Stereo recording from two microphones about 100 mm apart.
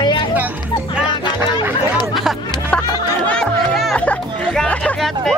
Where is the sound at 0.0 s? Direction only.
55° left (ahead or behind).